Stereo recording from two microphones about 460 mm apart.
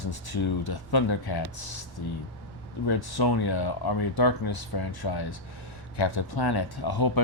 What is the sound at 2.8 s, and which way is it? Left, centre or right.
Speech, left.